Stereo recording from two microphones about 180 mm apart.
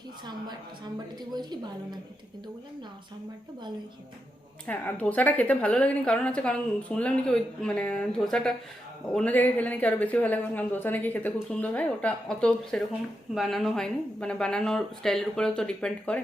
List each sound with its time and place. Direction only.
1.3 s a woman's voice: 25° right (ahead or behind)
4.6 s a woman's voice: 10° left (ahead or behind)